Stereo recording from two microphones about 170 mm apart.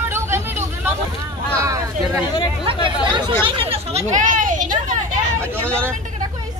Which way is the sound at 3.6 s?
35° right (ahead or behind).